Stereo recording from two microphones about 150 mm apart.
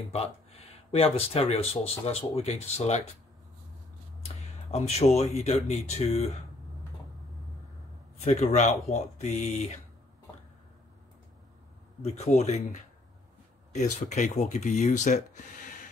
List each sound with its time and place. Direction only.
0.1 s speech: 40° left (ahead or behind)
4.2 s speech: 45° left (ahead or behind)
8.2 s speech: 45° left (ahead or behind)
12.0 s speech: 45° left (ahead or behind)